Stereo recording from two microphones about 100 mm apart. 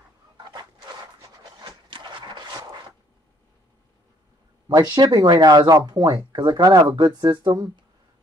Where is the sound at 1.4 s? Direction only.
45° right (ahead or behind).